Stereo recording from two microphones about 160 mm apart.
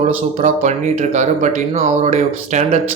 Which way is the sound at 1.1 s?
50° right (ahead or behind).